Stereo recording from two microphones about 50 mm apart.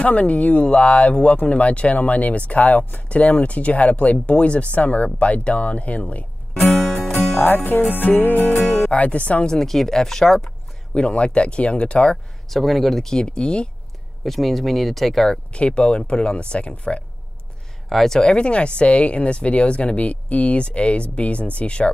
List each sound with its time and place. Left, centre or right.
0.0 s speech: left
6.6 s music: centre
7.3 s music: left
8.8 s speech: left
9.5 s speech: centre
11.0 s speech: left
12.4 s speech: centre
14.2 s speech: centre
15.5 s speech: left
17.8 s speech: centre
18.3 s speech: left